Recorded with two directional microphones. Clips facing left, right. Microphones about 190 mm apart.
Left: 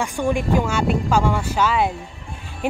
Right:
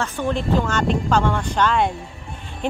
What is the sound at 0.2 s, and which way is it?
Speech, 10° left (ahead or behind).